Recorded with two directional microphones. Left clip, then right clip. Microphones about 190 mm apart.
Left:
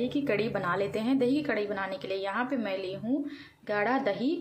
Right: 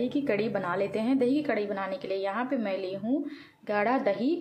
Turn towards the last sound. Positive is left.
turn(degrees=0)  # may be behind; listen again after turning